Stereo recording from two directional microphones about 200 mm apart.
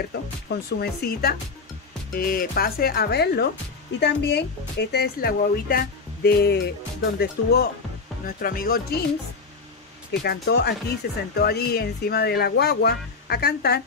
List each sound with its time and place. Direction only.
0.1 s speech: 55° left (ahead or behind)
10.2 s speech: 50° left (ahead or behind)